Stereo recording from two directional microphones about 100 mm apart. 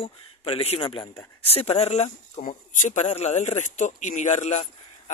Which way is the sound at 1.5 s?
85° left.